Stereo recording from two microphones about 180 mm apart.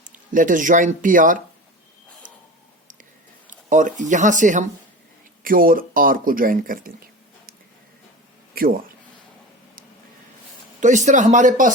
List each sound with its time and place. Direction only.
0.0 s speech: 45° right (ahead or behind)
3.4 s speech: 45° right (ahead or behind)
8.5 s speech: 55° right (ahead or behind)
10.8 s speech: 40° right (ahead or behind)